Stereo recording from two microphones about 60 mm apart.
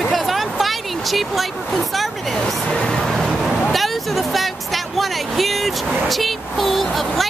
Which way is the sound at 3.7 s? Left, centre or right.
Centre.